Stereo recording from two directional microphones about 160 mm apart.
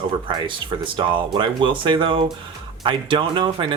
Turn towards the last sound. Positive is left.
turn(degrees=-30)  # may be behind; listen again after turning